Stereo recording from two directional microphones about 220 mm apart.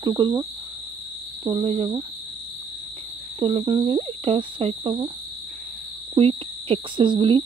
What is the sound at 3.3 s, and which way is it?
Speech, 25° right (ahead or behind).